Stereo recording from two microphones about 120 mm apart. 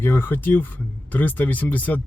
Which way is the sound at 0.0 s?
20° left (ahead or behind).